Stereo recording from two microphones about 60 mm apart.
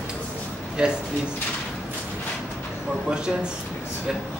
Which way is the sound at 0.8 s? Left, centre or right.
Centre.